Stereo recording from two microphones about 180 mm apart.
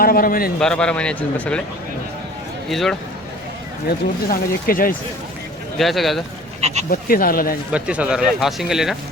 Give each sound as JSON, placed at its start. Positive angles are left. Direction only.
{"t": 0.0, "sound": "speech", "side_deg": 55}
{"t": 0.6, "sound": "a man's voice", "side_deg": 5}
{"t": 2.6, "sound": "speech", "side_deg": 0}
{"t": 3.8, "sound": "speech", "side_deg": 55}
{"t": 5.7, "sound": "a man's voice", "side_deg": 0}
{"t": 6.6, "sound": "speech", "side_deg": -40}
{"t": 6.9, "sound": "speech", "side_deg": 55}
{"t": 7.7, "sound": "a man's voice", "side_deg": -5}